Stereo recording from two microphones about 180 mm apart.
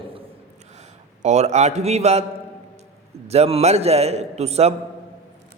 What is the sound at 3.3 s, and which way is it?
A man's voice, 35° right (ahead or behind).